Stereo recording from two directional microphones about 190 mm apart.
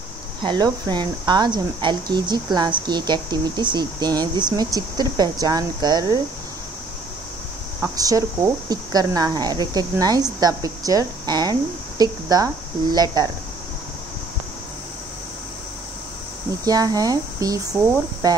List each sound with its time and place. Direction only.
0.4 s speech: 25° right (ahead or behind)
7.8 s speech: 20° right (ahead or behind)
16.6 s speech: 20° right (ahead or behind)